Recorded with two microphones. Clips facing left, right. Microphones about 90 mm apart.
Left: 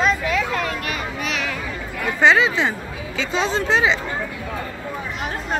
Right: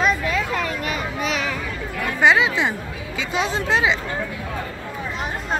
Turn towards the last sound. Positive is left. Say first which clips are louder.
# left 1 dB
turn(degrees=-10)  # may be behind; listen again after turning